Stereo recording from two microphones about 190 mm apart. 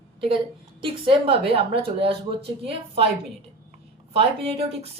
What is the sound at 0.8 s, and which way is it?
Speech, 25° right (ahead or behind).